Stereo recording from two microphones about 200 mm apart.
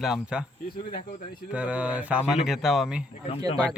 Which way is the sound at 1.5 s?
5° right (ahead or behind).